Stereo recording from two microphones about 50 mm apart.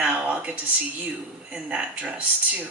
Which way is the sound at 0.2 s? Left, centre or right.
Right.